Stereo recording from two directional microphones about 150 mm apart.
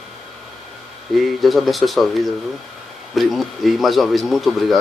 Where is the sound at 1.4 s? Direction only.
Centre (ahead or behind).